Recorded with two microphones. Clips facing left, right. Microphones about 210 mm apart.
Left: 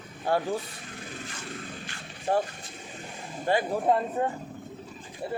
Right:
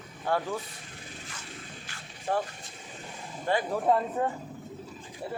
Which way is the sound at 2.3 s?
40° left (ahead or behind).